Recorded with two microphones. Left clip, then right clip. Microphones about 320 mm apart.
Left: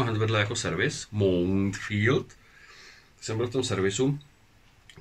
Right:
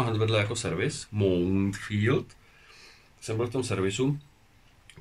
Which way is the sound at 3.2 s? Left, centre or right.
Centre.